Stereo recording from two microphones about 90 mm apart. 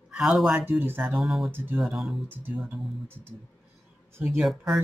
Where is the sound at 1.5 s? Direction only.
25° right (ahead or behind).